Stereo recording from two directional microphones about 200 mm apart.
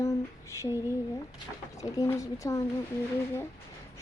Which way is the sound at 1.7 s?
15° left (ahead or behind).